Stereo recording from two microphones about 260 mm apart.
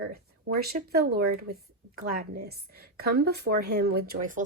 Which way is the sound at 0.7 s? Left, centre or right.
Right.